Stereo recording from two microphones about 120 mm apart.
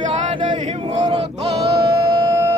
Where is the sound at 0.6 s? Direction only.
80° right.